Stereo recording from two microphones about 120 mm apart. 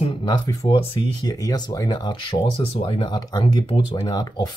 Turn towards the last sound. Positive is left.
turn(degrees=35)  # may be behind; listen again after turning